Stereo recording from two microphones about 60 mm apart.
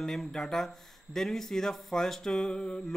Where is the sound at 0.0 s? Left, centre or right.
Centre.